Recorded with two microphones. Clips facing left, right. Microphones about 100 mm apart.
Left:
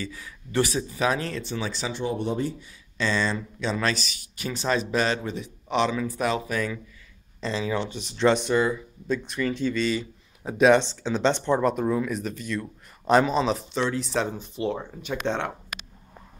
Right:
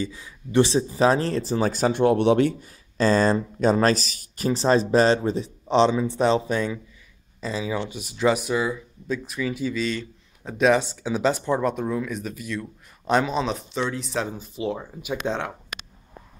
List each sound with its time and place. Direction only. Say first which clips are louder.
0.0 s a man's voice: right 5 dB; 20° right (ahead or behind); by 2.5 s 75° right (ahead or behind)
3.0 s a man's voice: right 7 dB; 45° right (ahead or behind); by 6.8 s 25° right (ahead or behind)
7.3 s speech: even; 5° right (ahead or behind)